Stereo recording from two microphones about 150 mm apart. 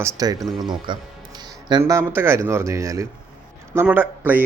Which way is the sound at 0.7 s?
30° right (ahead or behind).